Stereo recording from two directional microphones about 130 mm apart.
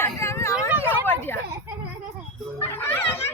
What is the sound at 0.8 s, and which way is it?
Vehicle, 15° left (ahead or behind).